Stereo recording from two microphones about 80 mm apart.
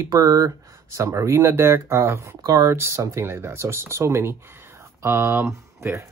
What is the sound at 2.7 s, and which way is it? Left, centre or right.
Speech, right.